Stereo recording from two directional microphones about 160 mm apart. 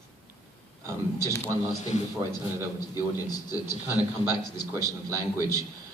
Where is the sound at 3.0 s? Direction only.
20° left (ahead or behind).